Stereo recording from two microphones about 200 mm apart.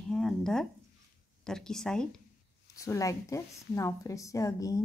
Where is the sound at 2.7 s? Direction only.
15° left (ahead or behind).